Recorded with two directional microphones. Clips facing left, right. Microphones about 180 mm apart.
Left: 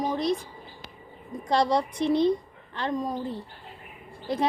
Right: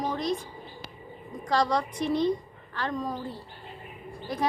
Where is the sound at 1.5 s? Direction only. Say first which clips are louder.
Left 2 dB; 25° left (ahead or behind).